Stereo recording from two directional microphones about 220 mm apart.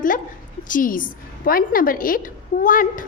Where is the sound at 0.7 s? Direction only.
40° left (ahead or behind).